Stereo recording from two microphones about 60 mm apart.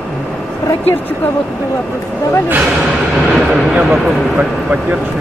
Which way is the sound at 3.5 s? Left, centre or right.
Centre.